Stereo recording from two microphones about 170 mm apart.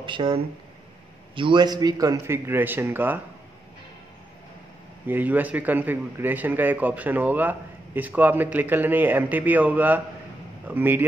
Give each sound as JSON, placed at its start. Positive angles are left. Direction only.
{"t": 0.0, "sound": "a man's voice", "side_deg": -30}
{"t": 5.0, "sound": "a man's voice", "side_deg": -10}